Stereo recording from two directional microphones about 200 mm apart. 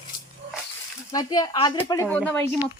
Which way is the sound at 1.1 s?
20° left (ahead or behind).